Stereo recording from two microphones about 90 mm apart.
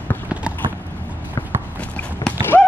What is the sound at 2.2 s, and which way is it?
Run, 55° left (ahead or behind).